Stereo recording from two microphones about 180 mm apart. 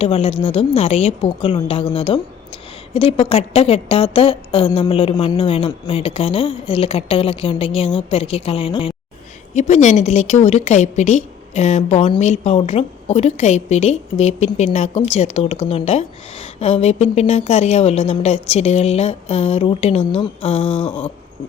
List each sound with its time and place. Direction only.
0.0 s a woman's voice: 30° left (ahead or behind)